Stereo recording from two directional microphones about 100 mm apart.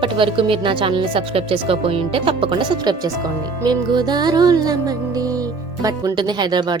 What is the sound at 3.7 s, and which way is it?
Music, 45° right (ahead or behind).